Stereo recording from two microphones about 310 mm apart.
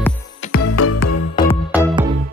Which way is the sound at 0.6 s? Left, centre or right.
Left.